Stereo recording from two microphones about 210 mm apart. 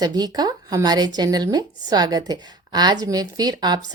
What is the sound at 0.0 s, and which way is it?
Speech, 20° right (ahead or behind).